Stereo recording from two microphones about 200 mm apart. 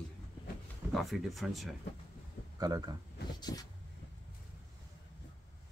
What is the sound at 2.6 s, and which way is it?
Speech, 20° right (ahead or behind).